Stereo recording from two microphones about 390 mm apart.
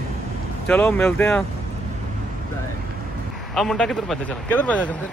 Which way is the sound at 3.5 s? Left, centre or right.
Centre.